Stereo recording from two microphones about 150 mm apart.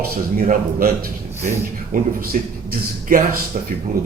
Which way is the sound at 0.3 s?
75° right (ahead or behind).